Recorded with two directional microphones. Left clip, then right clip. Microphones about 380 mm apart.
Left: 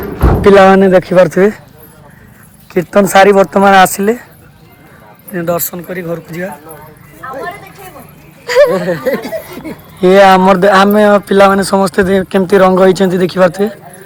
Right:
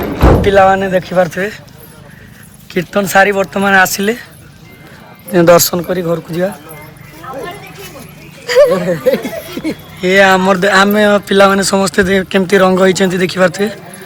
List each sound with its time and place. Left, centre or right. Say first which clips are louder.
0.4 s speech: left 6 dB; centre
2.7 s speech: left 3 dB; centre
5.3 s speech: right 9 dB; centre
8.4 s speech: even; left
10.0 s speech: left 4 dB; centre